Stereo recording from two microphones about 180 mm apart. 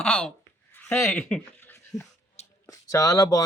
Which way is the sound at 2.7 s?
20° left (ahead or behind).